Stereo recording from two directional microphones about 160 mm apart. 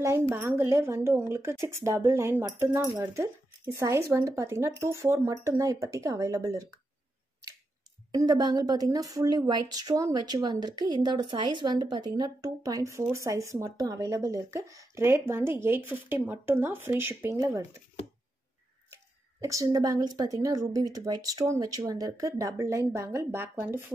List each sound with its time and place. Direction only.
0.3 s speech: 15° right (ahead or behind)
8.1 s a woman's voice: 25° right (ahead or behind)
19.4 s a woman's voice: 20° right (ahead or behind)